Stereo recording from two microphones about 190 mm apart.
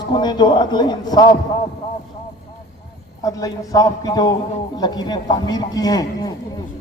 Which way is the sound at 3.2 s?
20° left (ahead or behind).